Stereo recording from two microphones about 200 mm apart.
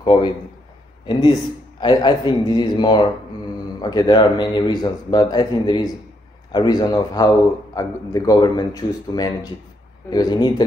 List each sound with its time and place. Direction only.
0.0 s a man's voice: 25° left (ahead or behind)
1.8 s a man's voice: 20° left (ahead or behind)